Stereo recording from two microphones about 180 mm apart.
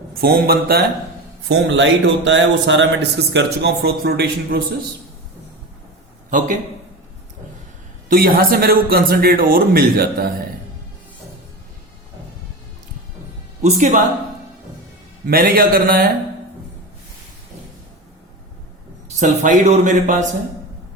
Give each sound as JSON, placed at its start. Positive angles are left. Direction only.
{"t": 0.1, "sound": "speech", "side_deg": -55}
{"t": 1.5, "sound": "a man's voice", "side_deg": -80}
{"t": 6.3, "sound": "speech", "side_deg": -45}
{"t": 8.1, "sound": "speech", "side_deg": -55}
{"t": 13.6, "sound": "speech", "side_deg": -40}
{"t": 15.3, "sound": "speech", "side_deg": -55}
{"t": 19.2, "sound": "speech", "side_deg": -40}